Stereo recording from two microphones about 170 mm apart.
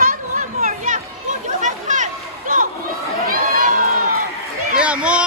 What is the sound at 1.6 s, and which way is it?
Chatter, 45° right (ahead or behind).